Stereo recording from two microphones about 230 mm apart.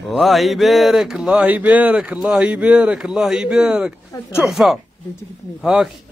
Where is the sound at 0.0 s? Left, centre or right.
Centre.